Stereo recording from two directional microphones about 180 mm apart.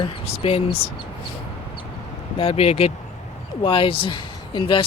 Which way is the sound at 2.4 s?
35° left (ahead or behind).